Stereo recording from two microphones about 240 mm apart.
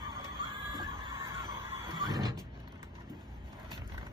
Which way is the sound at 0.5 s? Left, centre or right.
Right.